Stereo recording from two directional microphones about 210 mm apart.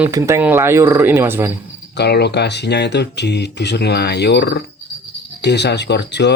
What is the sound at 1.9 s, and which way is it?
Speech, 50° left (ahead or behind).